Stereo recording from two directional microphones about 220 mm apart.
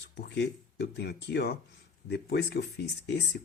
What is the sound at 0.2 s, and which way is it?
Speech, 50° left (ahead or behind).